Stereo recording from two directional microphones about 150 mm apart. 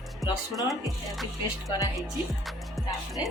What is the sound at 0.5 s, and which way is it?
Music, centre (ahead or behind).